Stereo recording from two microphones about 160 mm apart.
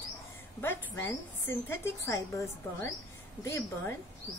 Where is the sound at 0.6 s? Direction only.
15° left (ahead or behind).